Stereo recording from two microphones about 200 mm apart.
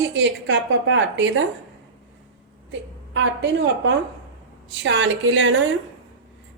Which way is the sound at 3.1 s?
65° right (ahead or behind).